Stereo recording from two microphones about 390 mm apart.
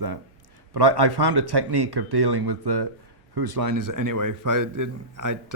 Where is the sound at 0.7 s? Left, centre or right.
Right.